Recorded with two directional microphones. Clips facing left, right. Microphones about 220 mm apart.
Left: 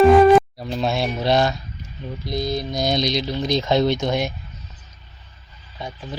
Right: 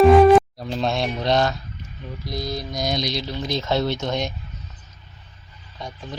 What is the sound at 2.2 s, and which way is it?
Speech, 25° left (ahead or behind).